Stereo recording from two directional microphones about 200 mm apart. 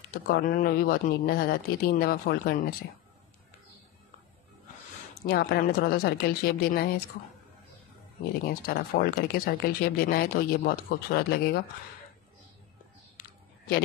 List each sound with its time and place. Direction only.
0.1 s speech: 45° left (ahead or behind)
5.2 s speech: 50° left (ahead or behind)
8.5 s speech: 50° left (ahead or behind)
13.2 s a sound: 45° left (ahead or behind)